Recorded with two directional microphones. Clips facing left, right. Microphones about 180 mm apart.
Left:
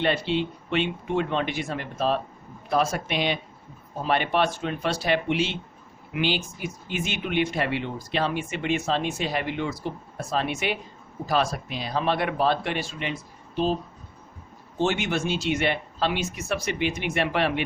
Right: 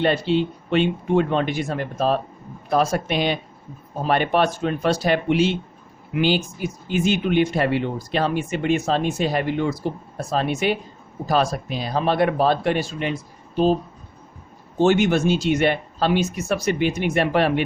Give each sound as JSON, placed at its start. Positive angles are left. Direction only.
{"t": 0.0, "sound": "speech", "side_deg": -40}
{"t": 14.8, "sound": "speech", "side_deg": -45}